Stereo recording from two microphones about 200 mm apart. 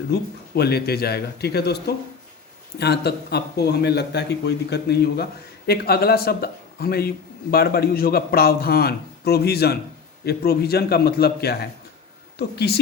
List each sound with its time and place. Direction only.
0.1 s a man's voice: 50° left (ahead or behind)